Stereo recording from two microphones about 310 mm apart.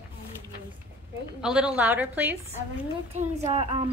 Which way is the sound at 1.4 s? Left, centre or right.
Centre.